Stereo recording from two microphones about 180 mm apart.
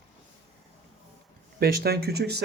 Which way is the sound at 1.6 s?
60° right (ahead or behind).